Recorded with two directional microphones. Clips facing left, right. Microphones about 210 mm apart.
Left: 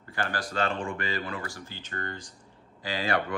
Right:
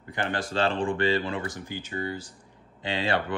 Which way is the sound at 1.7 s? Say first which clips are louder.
Right 6 dB; 10° right (ahead or behind).